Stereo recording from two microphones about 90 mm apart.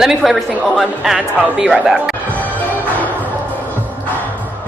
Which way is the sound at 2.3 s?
20° left (ahead or behind).